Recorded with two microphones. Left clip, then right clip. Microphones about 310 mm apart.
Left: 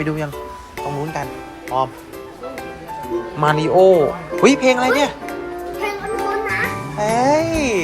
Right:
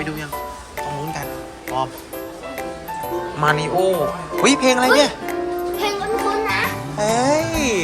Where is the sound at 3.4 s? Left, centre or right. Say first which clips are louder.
Left 5 dB; centre.